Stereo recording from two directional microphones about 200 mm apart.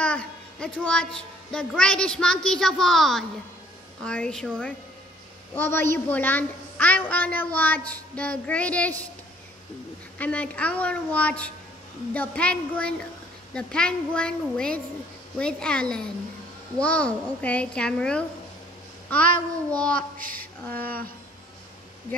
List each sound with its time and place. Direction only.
0.0 s a woman's voice: 5° left (ahead or behind)
5.5 s a woman's voice: 10° left (ahead or behind)
10.1 s a woman's voice: 5° left (ahead or behind)
20.0 s a sound: 45° right (ahead or behind)
20.8 s speech: 50° right (ahead or behind)